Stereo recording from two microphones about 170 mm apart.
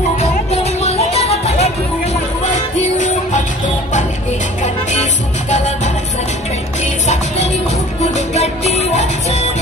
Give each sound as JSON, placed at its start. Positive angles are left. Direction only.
{"t": 0.2, "sound": "music", "side_deg": 40}
{"t": 6.8, "sound": "music", "side_deg": 40}